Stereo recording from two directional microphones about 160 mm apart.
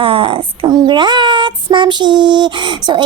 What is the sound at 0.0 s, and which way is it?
A child's voice, 35° right (ahead or behind).